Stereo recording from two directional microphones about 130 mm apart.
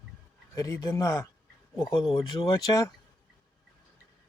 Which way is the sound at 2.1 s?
40° left (ahead or behind).